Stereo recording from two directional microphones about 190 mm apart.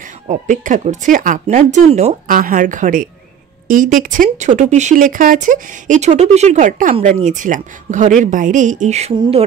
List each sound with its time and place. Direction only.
0.3 s speech: 40° right (ahead or behind)
2.2 s speech: 45° right (ahead or behind); by 9.4 s 30° right (ahead or behind)